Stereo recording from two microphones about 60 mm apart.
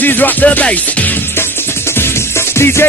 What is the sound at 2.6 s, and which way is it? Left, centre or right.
Music, left.